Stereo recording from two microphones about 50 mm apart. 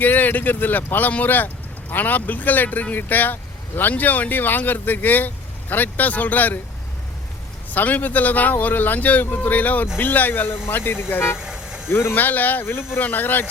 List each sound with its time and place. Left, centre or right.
0.0 s speech: left
7.7 s speech: left
11.3 s vehicle: centre
11.9 s speech: left
12.1 s speech: left
12.6 s speech: left
13.0 s speech: left